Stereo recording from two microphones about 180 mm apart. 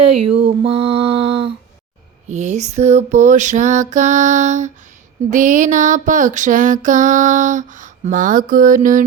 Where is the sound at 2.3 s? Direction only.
40° right (ahead or behind).